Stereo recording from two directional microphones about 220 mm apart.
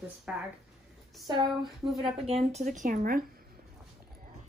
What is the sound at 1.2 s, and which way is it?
A woman's voice, 20° right (ahead or behind).